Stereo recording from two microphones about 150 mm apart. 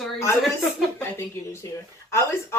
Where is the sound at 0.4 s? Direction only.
Centre (ahead or behind).